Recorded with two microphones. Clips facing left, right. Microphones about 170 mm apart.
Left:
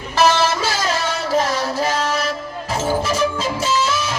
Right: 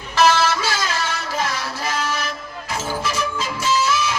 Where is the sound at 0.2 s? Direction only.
40° left (ahead or behind).